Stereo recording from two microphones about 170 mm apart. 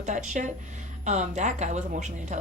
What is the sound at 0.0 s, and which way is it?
Speech, 45° right (ahead or behind).